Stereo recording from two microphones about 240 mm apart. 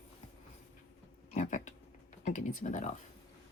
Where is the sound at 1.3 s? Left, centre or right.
Left.